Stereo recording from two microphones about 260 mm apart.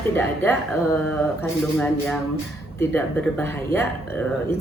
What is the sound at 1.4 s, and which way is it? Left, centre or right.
Speech, centre.